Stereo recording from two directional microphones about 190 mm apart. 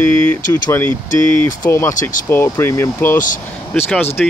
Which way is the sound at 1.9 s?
45° left (ahead or behind).